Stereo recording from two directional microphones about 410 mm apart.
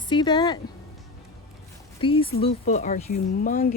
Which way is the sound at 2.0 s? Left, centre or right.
Centre.